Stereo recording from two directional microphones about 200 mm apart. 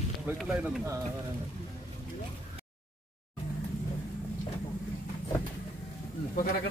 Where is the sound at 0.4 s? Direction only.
5° right (ahead or behind).